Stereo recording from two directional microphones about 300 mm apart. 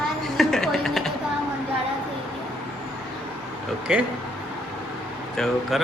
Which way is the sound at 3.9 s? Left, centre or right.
Centre.